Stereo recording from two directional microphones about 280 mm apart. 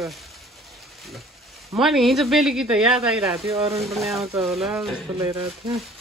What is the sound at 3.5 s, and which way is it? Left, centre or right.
Speech, right.